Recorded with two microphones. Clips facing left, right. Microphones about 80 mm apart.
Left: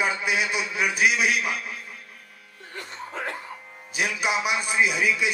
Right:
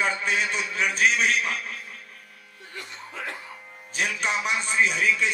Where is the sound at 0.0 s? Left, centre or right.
Centre.